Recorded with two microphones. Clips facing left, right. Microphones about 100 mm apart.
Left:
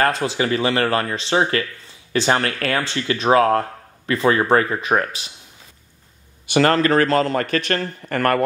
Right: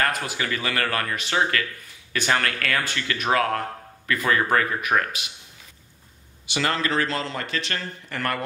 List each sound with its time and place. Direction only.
0.0 s speech: 25° left (ahead or behind)
6.4 s speech: 50° left (ahead or behind)